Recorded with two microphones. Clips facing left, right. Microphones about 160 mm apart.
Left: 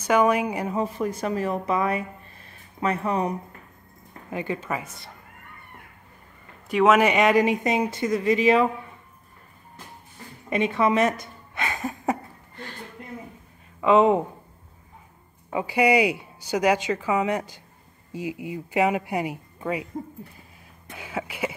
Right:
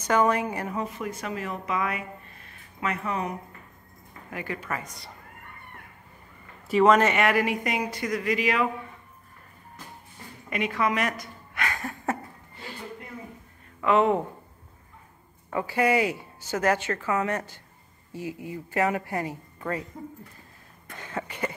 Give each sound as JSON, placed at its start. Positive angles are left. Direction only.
{"t": 0.0, "sound": "a woman's voice", "side_deg": 10}
{"t": 0.7, "sound": "speech", "side_deg": 35}
{"t": 4.3, "sound": "speech", "side_deg": 25}
{"t": 4.8, "sound": "speech", "side_deg": 0}
{"t": 6.7, "sound": "speech", "side_deg": 5}
{"t": 10.5, "sound": "a woman's voice", "side_deg": 25}
{"t": 13.7, "sound": "a woman's voice", "side_deg": 20}
{"t": 15.5, "sound": "a woman's voice", "side_deg": 15}
{"t": 20.9, "sound": "a woman's voice", "side_deg": 10}